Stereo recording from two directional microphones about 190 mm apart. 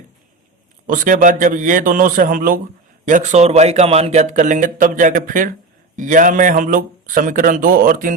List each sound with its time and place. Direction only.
0.9 s a man's voice: 45° right (ahead or behind)